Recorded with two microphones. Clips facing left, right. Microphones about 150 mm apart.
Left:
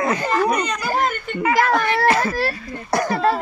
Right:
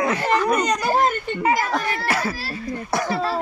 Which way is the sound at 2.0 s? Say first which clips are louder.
Left 6 dB; 10° right (ahead or behind).